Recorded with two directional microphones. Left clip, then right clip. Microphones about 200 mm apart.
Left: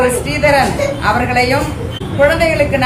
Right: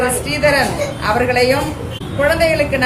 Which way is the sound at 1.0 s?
15° right (ahead or behind).